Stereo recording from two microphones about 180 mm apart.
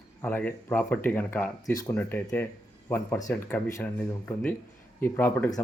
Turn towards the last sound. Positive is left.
turn(degrees=15)  # may be behind; listen again after turning